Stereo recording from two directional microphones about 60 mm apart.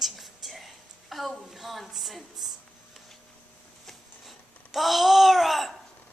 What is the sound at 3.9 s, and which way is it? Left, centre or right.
Babbling, centre.